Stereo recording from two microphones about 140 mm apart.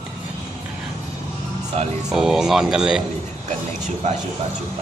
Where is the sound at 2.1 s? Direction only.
5° right (ahead or behind).